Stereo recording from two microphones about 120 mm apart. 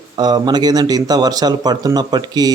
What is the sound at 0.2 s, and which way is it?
Speech, 35° right (ahead or behind).